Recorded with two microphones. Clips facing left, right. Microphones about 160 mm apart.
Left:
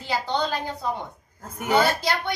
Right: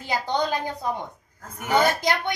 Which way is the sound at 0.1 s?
15° right (ahead or behind).